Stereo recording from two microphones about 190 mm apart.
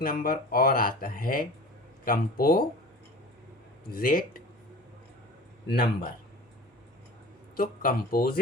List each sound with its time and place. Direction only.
0.0 s speech: 50° left (ahead or behind)
3.9 s speech: 45° left (ahead or behind)
5.6 s speech: 50° left (ahead or behind)
7.5 s speech: 50° left (ahead or behind)